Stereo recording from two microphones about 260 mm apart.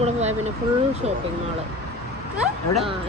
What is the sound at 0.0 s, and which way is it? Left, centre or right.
Vehicle, right.